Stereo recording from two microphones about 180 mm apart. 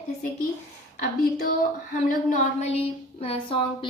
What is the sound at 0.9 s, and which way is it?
Speech, 55° left (ahead or behind).